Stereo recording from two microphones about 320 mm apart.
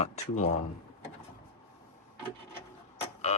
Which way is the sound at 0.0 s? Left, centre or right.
Left.